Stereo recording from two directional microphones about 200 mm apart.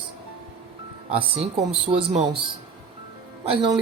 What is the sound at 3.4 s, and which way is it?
Speech, 30° right (ahead or behind).